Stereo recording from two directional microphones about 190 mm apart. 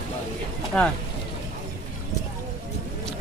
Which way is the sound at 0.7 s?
5° left (ahead or behind).